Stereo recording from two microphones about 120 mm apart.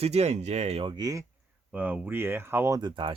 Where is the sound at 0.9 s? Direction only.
35° right (ahead or behind).